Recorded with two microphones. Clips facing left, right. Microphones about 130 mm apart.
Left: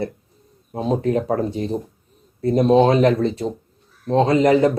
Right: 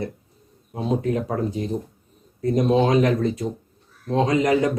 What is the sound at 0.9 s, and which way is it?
Speech, 35° left (ahead or behind).